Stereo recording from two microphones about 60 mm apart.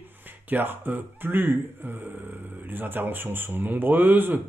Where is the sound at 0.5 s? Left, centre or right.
Right.